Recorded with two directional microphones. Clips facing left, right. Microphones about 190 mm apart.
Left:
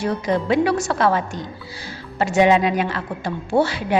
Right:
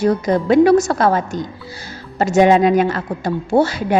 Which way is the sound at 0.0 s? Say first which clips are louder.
Right 5 dB; 45° right (ahead or behind).